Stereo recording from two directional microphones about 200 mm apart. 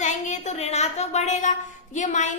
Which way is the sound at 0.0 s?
35° left (ahead or behind).